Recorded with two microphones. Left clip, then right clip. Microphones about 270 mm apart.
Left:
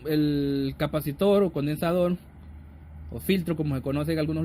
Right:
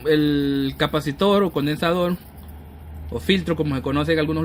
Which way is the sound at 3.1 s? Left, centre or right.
Left.